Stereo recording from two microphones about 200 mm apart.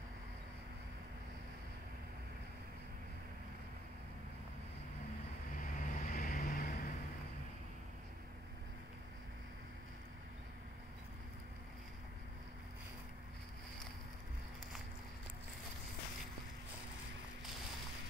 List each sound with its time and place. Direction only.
5.6 s vehicle: 40° left (ahead or behind)